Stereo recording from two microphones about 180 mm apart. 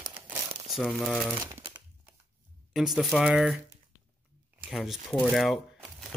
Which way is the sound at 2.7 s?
Centre (ahead or behind).